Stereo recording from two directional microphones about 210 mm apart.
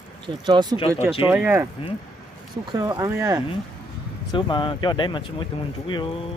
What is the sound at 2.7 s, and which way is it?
Speech, 15° right (ahead or behind).